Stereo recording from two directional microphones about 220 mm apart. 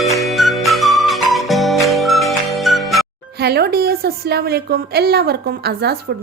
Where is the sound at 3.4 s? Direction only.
45° right (ahead or behind).